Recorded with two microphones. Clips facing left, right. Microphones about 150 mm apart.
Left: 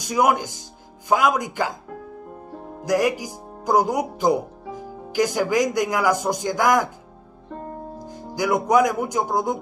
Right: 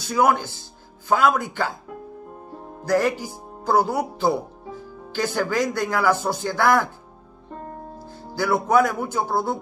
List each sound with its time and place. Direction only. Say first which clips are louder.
0.0 s speech: even; 15° left (ahead or behind)
2.8 s speech: even; 15° left (ahead or behind)
8.0 s speech: left 1 dB; 15° left (ahead or behind)